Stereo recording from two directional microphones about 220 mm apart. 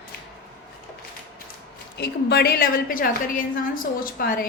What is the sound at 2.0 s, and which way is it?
A woman's voice, 45° left (ahead or behind).